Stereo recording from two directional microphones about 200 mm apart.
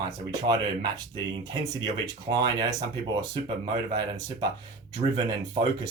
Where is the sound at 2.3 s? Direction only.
20° right (ahead or behind).